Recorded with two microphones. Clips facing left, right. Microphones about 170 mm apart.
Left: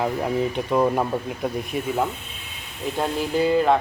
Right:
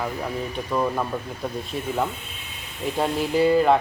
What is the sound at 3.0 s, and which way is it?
Speech, centre (ahead or behind).